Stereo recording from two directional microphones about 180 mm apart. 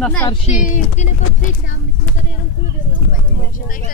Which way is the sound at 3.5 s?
50° left (ahead or behind).